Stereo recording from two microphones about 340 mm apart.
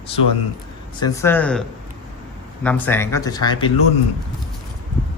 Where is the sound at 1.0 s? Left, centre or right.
Centre.